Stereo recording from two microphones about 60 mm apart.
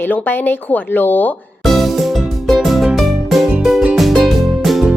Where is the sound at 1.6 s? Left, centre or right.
Centre.